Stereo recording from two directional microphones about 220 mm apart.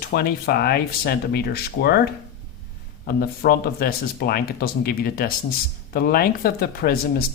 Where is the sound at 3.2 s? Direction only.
45° left (ahead or behind).